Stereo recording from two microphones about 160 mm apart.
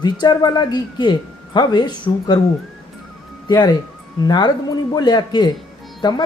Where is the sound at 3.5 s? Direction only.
25° left (ahead or behind).